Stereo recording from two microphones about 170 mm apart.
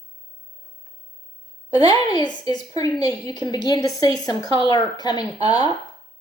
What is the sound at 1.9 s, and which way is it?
A woman's voice, 25° left (ahead or behind).